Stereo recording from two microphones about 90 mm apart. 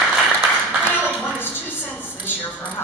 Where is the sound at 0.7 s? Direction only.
15° right (ahead or behind).